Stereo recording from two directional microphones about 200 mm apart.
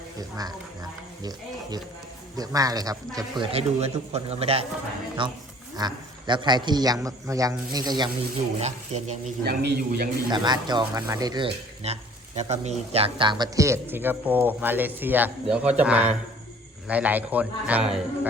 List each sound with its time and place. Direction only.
0.2 s a man's voice: 20° right (ahead or behind)
2.3 s a man's voice: 20° right (ahead or behind)
8.5 s speech: 30° right (ahead or behind)
9.4 s a man's voice: 50° right (ahead or behind)
10.2 s a man's voice: 20° right (ahead or behind); by 18.3 s 5° right (ahead or behind)